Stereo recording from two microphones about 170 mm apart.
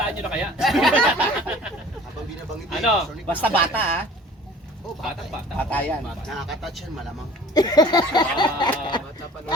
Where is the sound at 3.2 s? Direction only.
10° left (ahead or behind).